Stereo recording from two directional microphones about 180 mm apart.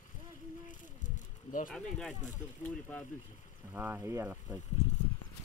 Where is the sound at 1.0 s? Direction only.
45° left (ahead or behind).